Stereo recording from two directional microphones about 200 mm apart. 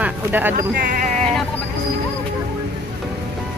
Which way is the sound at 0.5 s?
45° right (ahead or behind).